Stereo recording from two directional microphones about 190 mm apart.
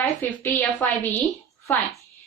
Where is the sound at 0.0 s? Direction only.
10° left (ahead or behind).